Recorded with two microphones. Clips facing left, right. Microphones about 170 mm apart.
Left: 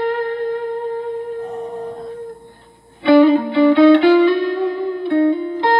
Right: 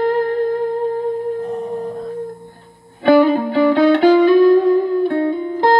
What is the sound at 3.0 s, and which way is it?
Music, 45° right (ahead or behind).